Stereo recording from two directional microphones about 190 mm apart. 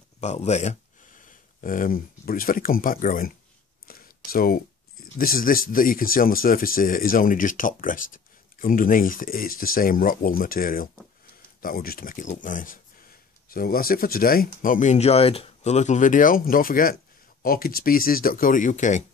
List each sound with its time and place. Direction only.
0.2 s speech: 35° left (ahead or behind)
3.8 s a sound: 50° left (ahead or behind)
5.1 s speech: 50° left (ahead or behind)